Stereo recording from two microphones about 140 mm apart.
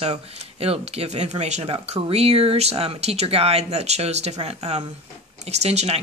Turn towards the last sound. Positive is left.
turn(degrees=-50)  # may be behind; listen again after turning